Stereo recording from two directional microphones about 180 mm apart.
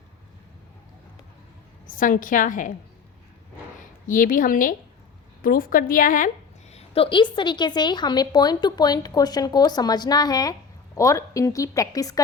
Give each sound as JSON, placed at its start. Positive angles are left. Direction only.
{"t": 1.9, "sound": "a woman's voice", "side_deg": 50}
{"t": 3.8, "sound": "a woman's voice", "side_deg": 45}